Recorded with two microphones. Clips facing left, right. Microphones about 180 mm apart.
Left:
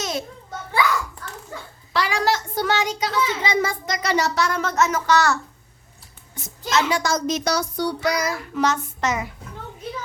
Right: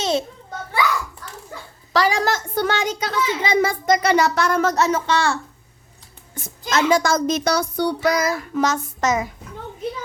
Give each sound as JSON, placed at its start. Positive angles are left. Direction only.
{"t": 0.0, "sound": "children playing", "side_deg": -30}
{"t": 1.9, "sound": "a child's voice", "side_deg": -40}
{"t": 4.7, "sound": "speech", "side_deg": -30}
{"t": 6.3, "sound": "speech", "side_deg": -50}